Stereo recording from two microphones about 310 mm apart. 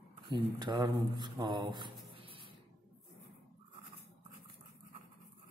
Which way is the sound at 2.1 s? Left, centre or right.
Centre.